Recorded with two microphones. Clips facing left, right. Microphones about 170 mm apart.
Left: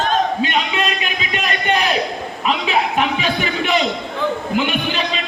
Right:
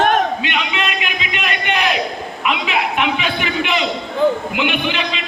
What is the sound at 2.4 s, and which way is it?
A man's voice, 35° left (ahead or behind).